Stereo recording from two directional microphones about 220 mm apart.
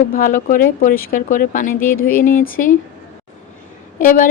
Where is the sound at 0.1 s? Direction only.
40° left (ahead or behind).